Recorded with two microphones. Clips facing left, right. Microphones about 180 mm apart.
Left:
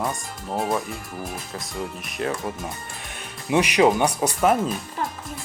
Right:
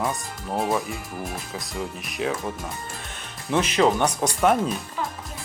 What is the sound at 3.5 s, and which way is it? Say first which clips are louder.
Speech: left 2 dB; 15° left (ahead or behind).